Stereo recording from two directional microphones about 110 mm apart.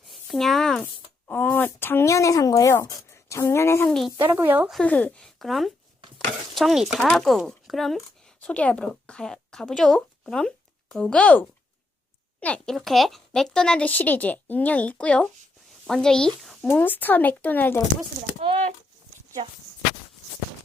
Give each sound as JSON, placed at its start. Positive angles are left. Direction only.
{"t": 0.1, "sound": "speech", "side_deg": 0}
{"t": 1.3, "sound": "speech", "side_deg": 15}
{"t": 3.8, "sound": "speech", "side_deg": 5}
{"t": 4.2, "sound": "speech", "side_deg": -20}
{"t": 4.7, "sound": "speech", "side_deg": 10}
{"t": 16.6, "sound": "speech", "side_deg": 15}